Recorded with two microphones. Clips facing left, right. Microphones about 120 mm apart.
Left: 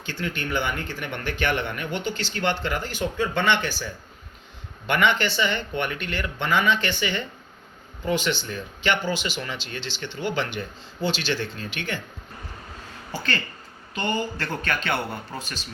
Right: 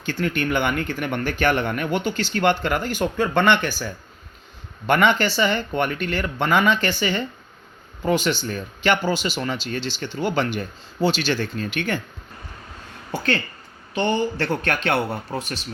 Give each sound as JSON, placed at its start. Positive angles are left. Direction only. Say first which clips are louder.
{"t": 0.0, "sound": "speech", "louder": "right 7 dB", "side_deg": -50}
{"t": 4.9, "sound": "speech", "louder": "right 4 dB", "side_deg": -40}
{"t": 14.0, "sound": "speech", "louder": "right 5 dB", "side_deg": -35}